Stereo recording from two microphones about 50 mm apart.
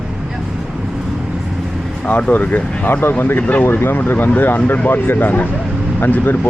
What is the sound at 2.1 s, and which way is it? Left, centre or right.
Speech, left.